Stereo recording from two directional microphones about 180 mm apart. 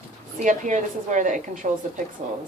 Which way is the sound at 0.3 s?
45° right (ahead or behind).